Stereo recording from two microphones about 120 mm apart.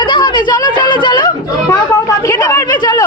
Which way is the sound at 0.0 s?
40° left (ahead or behind).